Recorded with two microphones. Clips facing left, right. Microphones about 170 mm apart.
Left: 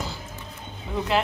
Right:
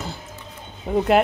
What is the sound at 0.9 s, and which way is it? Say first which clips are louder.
Speech: right 8 dB; 50° right (ahead or behind).